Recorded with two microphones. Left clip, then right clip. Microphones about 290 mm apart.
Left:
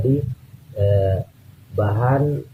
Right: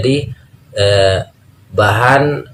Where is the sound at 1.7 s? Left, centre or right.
Centre.